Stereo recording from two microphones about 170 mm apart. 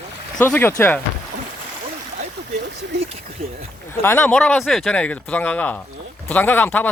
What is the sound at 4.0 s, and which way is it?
Speech, 10° left (ahead or behind).